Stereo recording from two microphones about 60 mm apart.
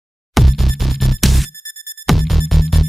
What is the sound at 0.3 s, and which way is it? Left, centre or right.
Music, centre.